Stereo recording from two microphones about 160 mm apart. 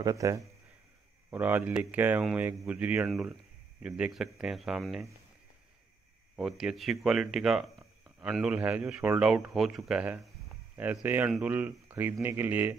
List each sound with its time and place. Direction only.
0.0 s speech: 20° right (ahead or behind)
1.3 s speech: 10° right (ahead or behind)
6.3 s speech: centre (ahead or behind)